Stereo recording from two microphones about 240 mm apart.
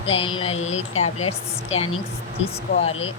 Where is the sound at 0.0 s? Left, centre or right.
Left.